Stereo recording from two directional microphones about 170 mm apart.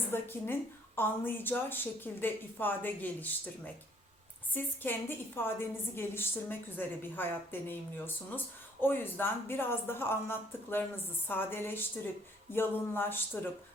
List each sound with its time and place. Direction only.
0.1 s speech: 10° left (ahead or behind)